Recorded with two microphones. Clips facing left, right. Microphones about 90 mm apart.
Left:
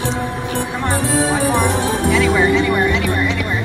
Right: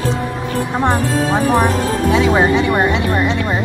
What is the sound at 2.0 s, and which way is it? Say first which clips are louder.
Music: right 2 dB; 20° right (ahead or behind).